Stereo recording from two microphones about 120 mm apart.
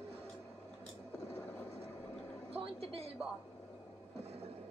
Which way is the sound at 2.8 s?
55° right (ahead or behind).